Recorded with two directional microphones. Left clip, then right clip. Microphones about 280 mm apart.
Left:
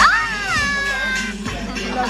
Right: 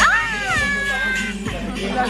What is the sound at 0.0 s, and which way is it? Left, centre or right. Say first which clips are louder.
Cat: left 2 dB; centre.